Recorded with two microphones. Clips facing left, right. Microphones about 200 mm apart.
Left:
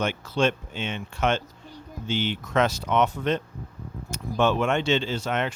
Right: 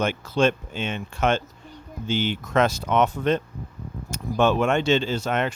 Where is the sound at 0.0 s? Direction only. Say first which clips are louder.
Right 3 dB; 45° right (ahead or behind).